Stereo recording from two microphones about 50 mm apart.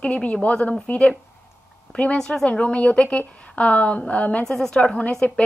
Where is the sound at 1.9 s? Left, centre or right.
Left.